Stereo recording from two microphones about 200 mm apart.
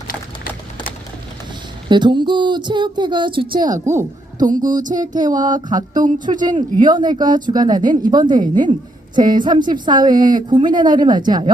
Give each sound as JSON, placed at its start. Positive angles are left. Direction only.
{"t": 1.9, "sound": "a woman's voice", "side_deg": -20}
{"t": 4.6, "sound": "music", "side_deg": -40}
{"t": 5.3, "sound": "a woman's voice", "side_deg": -20}
{"t": 5.9, "sound": "music", "side_deg": -40}
{"t": 6.7, "sound": "a woman's voice", "side_deg": -20}